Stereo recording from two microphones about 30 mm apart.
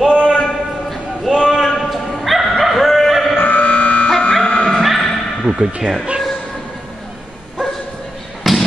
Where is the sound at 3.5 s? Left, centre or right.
Left.